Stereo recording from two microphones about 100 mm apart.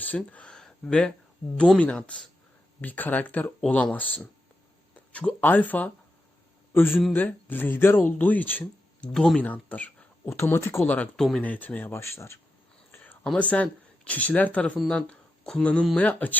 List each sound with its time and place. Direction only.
0.3 s speech: 10° left (ahead or behind)
9.1 s speech: 5° left (ahead or behind)
10.2 s speech: 25° left (ahead or behind)
12.9 s whispering: 20° left (ahead or behind)
13.3 s speech: 15° left (ahead or behind)